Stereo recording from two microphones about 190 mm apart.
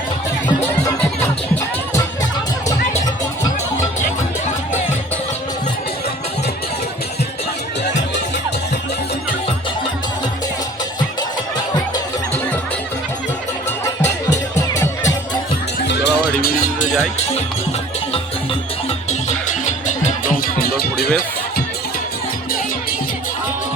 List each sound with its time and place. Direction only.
13.7 s music: 15° left (ahead or behind)
15.9 s music: 65° left (ahead or behind)
16.4 s music: 50° left (ahead or behind)
19.5 s music: 40° left (ahead or behind); by 21.1 s 55° left (ahead or behind)